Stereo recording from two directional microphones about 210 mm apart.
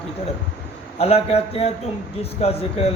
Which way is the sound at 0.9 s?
30° left (ahead or behind).